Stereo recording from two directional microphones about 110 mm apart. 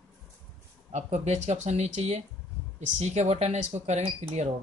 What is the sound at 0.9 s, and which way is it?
Speech, 85° right.